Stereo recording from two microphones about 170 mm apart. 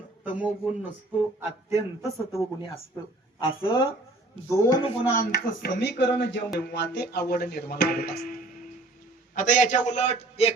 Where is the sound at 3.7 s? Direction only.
30° left (ahead or behind).